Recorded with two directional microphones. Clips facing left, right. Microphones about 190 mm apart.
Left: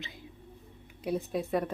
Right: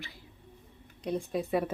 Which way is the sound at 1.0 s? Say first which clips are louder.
Even; 5° left (ahead or behind).